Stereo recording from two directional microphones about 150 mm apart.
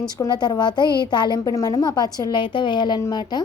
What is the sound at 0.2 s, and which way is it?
A woman's voice, 25° left (ahead or behind).